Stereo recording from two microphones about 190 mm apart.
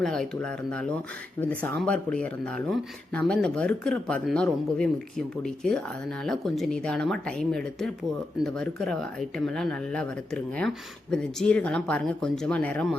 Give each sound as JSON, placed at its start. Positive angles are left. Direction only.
{"t": 0.0, "sound": "speech", "side_deg": 0}